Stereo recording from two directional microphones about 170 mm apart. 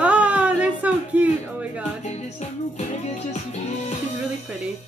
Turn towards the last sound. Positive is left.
turn(degrees=40)  # may be behind; listen again after turning